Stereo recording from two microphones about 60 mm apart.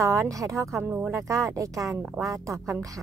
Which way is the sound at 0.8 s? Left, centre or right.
Right.